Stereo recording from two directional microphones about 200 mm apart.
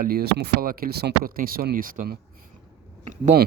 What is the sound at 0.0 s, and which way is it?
Speech, 50° right (ahead or behind).